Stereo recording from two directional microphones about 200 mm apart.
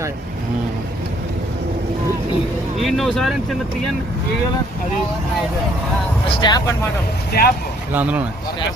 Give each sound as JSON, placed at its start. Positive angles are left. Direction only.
{"t": 2.7, "sound": "speech", "side_deg": 0}
{"t": 6.3, "sound": "speech", "side_deg": 20}
{"t": 7.3, "sound": "speech", "side_deg": 50}
{"t": 7.9, "sound": "speech", "side_deg": -5}